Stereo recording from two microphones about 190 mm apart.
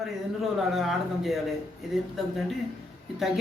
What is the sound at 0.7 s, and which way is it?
Speech, centre (ahead or behind).